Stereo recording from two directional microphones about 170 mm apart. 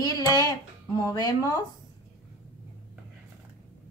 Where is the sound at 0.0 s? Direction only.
20° left (ahead or behind).